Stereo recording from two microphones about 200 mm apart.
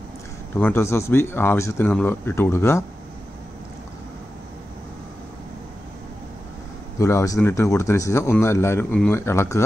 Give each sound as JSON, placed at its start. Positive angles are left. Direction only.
{"t": 0.6, "sound": "speech", "side_deg": 10}
{"t": 7.0, "sound": "speech", "side_deg": 15}